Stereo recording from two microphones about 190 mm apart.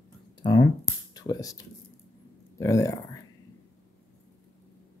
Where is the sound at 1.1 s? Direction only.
20° left (ahead or behind).